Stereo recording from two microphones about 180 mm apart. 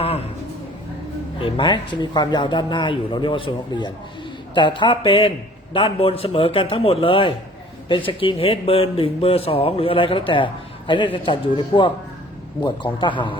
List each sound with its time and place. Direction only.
1.4 s a man's voice: 30° left (ahead or behind)